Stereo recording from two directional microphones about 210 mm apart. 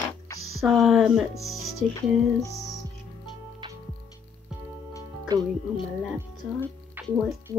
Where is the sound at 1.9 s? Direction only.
15° left (ahead or behind).